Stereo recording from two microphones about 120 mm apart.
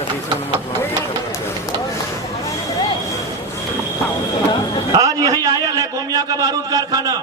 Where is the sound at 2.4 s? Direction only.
30° left (ahead or behind).